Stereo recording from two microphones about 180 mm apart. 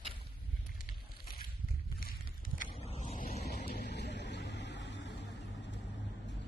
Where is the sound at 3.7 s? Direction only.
65° left (ahead or behind).